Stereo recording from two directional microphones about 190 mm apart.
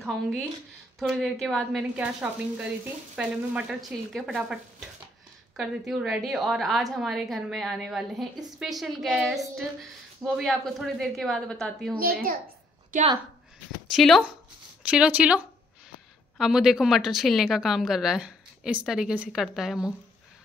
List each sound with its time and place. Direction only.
0.0 s a woman's voice: centre (ahead or behind)
12.0 s a child's voice: 50° right (ahead or behind)
13.9 s a woman's voice: centre (ahead or behind)